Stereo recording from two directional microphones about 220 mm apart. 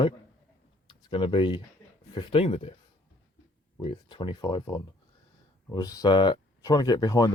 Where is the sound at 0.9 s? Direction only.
20° left (ahead or behind).